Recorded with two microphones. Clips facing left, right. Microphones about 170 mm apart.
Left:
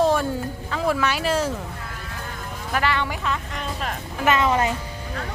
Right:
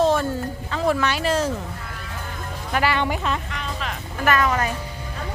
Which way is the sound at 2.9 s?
20° right (ahead or behind).